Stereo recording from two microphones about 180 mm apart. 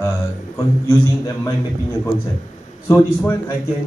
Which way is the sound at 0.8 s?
15° left (ahead or behind).